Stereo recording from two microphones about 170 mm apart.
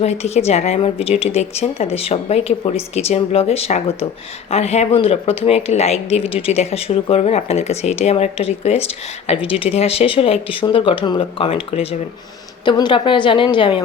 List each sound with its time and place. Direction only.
0.0 s a woman's voice: 40° left (ahead or behind)